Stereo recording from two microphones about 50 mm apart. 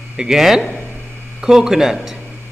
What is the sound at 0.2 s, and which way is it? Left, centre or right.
A man's voice, centre.